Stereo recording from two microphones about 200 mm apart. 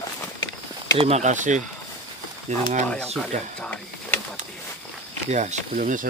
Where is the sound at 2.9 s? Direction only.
5° left (ahead or behind).